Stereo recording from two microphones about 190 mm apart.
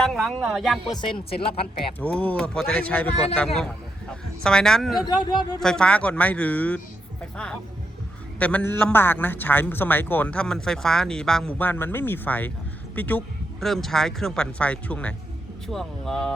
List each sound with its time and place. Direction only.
0.0 s speech: centre (ahead or behind)
1.4 s speech: 30° left (ahead or behind)
2.0 s a man's voice: 10° left (ahead or behind)
8.4 s a man's voice: 5° left (ahead or behind)